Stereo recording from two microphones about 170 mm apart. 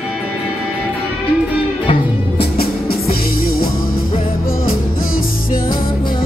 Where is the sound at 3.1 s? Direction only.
60° left (ahead or behind).